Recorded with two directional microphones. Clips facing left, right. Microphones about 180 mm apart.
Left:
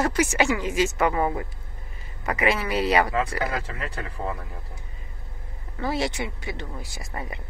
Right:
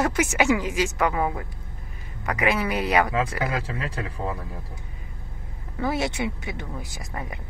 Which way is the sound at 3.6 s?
30° right (ahead or behind).